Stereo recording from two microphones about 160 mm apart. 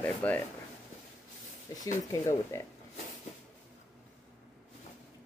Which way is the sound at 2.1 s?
20° left (ahead or behind).